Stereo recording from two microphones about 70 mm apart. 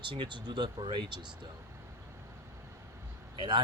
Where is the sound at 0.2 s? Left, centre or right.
Right.